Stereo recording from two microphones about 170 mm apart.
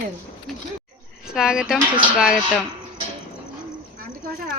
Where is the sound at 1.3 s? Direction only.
5° right (ahead or behind).